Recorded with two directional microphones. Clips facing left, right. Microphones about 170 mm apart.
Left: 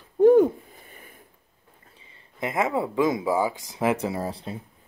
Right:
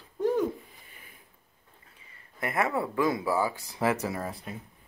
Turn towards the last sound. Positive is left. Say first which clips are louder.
# left 5 dB
turn(degrees=30)  # may be behind; listen again after turning